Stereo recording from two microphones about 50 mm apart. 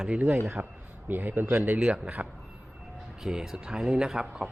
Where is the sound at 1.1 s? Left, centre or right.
Right.